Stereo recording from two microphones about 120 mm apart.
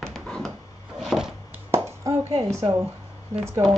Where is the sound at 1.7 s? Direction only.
25° right (ahead or behind).